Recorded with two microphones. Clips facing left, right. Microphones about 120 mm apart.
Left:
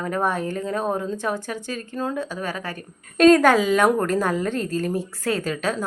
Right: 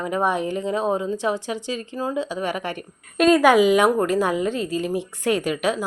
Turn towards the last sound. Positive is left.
turn(degrees=-15)  # may be behind; listen again after turning